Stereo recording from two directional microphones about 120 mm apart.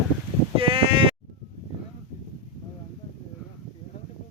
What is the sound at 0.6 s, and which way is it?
Bleat, 50° right (ahead or behind).